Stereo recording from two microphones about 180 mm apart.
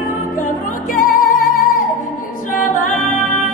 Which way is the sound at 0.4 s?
45° left (ahead or behind).